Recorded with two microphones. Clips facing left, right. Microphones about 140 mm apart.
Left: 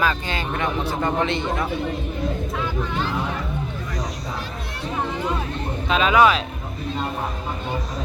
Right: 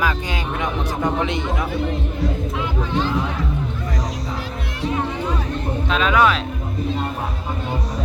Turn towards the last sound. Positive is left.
turn(degrees=0)  # may be behind; listen again after turning